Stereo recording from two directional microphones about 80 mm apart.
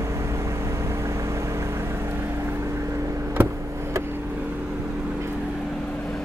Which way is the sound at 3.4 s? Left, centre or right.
Right.